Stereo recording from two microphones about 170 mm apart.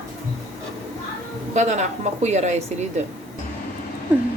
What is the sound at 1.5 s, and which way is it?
A woman's voice, 45° right (ahead or behind).